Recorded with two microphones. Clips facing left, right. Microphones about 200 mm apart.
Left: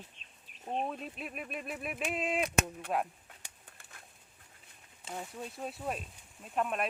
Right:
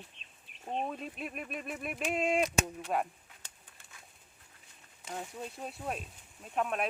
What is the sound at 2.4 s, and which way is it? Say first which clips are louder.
Speech: even; 55° left (ahead or behind).